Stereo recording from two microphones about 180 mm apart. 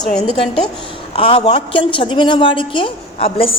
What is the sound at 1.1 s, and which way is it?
A woman's voice, 35° left (ahead or behind).